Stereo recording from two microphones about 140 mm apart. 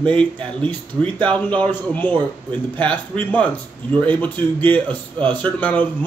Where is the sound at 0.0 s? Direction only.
10° left (ahead or behind).